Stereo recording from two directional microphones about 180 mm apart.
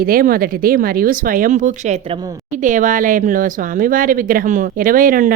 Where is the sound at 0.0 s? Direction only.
55° right (ahead or behind).